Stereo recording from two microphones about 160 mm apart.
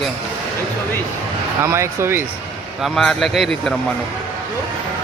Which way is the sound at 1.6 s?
15° right (ahead or behind).